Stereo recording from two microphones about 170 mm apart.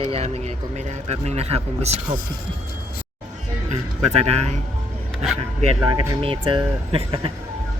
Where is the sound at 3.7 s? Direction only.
40° right (ahead or behind).